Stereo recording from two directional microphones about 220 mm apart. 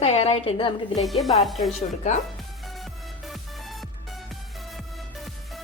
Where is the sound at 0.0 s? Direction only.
30° left (ahead or behind).